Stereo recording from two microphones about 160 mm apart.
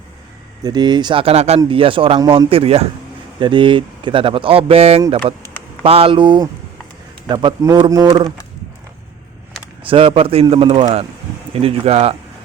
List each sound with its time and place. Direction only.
0.6 s a man's voice: 25° right (ahead or behind)
9.8 s speech: 35° right (ahead or behind)